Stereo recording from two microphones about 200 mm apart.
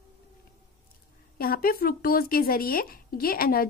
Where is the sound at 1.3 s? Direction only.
45° left (ahead or behind).